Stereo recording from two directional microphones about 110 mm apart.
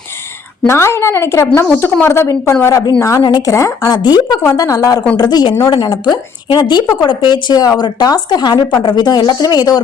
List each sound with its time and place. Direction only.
0.7 s a woman's voice: 25° left (ahead or behind)